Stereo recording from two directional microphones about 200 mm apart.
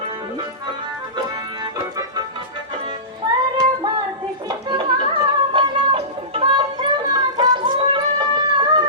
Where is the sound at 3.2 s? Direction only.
20° right (ahead or behind).